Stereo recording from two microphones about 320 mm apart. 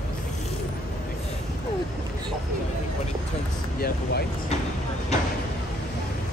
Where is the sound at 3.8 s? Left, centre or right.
Left.